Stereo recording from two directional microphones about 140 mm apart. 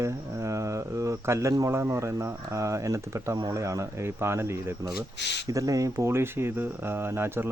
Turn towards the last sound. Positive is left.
turn(degrees=-15)  # may be behind; listen again after turning